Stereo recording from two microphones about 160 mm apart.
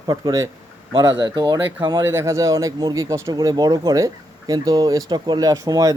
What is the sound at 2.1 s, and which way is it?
Speech, 15° right (ahead or behind).